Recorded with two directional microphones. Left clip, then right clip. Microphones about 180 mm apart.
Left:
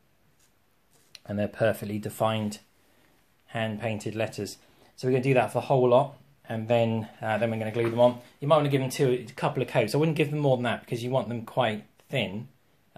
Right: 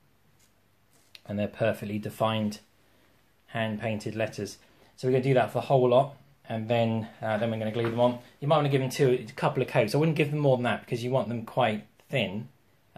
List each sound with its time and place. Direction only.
1.1 s speech: 25° left (ahead or behind)
8.8 s speech: 10° left (ahead or behind)